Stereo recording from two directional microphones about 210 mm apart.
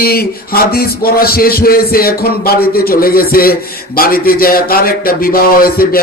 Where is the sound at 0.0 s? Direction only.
45° left (ahead or behind).